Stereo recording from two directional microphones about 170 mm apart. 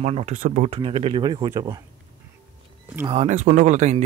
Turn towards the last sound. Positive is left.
turn(degrees=-40)  # may be behind; listen again after turning